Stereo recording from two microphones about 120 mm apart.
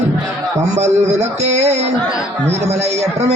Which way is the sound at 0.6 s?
75° right (ahead or behind).